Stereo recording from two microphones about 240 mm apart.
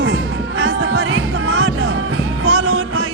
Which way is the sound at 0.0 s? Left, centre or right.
Right.